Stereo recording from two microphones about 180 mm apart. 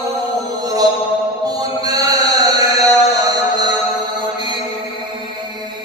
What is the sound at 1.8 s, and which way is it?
Chant, 20° right (ahead or behind).